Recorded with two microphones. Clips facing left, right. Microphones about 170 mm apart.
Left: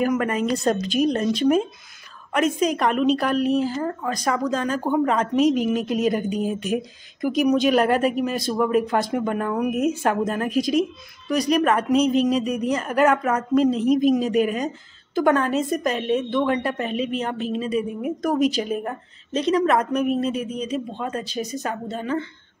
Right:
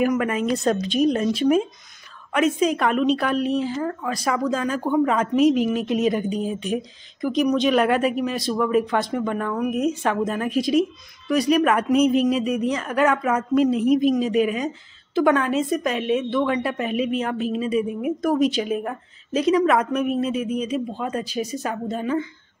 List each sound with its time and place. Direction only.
0.0 s speech: 5° right (ahead or behind)
7.8 s speech: 40° left (ahead or behind)
8.1 s speech: centre (ahead or behind)
17.6 s speech: 35° left (ahead or behind)
18.4 s speech: centre (ahead or behind)